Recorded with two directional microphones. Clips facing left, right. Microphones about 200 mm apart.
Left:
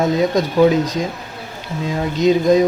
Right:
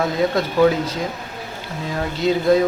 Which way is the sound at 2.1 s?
20° left (ahead or behind).